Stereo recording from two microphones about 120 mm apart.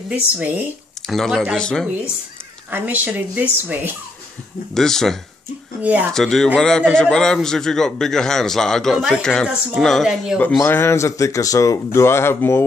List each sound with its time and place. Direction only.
0.1 s speech: 15° right (ahead or behind)
1.0 s a man's voice: 5° left (ahead or behind)
2.7 s speech: 15° right (ahead or behind)
4.7 s a man's voice: 5° left (ahead or behind)
5.8 s speech: 10° right (ahead or behind)
6.1 s a man's voice: 5° left (ahead or behind)
10.6 s speech: 20° left (ahead or behind)